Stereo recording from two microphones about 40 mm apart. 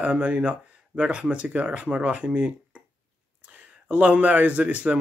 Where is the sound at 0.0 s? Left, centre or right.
Right.